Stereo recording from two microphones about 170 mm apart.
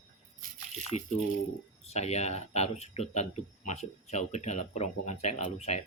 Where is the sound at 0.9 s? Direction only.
40° left (ahead or behind).